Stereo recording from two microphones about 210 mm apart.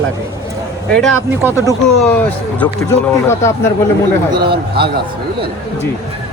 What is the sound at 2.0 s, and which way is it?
Speech, 5° left (ahead or behind).